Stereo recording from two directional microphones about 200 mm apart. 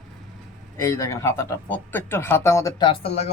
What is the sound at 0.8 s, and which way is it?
Speech, 15° left (ahead or behind).